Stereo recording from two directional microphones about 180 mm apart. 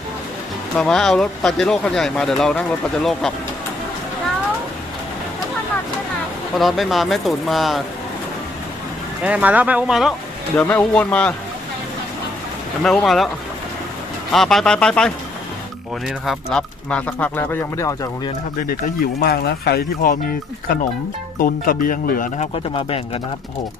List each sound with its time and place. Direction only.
0.8 s speech: 5° left (ahead or behind)
6.6 s speech: centre (ahead or behind)
9.2 s speech: 10° right (ahead or behind)
10.6 s speech: 10° left (ahead or behind)
12.8 s speech: centre (ahead or behind)
14.3 s speech: centre (ahead or behind)
19.2 s speech: 60° left (ahead or behind)
21.3 s speech: 50° left (ahead or behind)
22.7 s speech: 30° left (ahead or behind)